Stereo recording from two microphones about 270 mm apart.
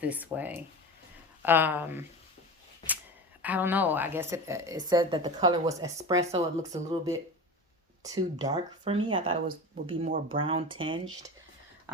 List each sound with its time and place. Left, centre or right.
0.0 s a woman's voice: centre
3.4 s a woman's voice: centre